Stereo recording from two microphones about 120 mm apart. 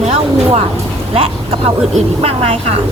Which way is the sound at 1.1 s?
55° right (ahead or behind).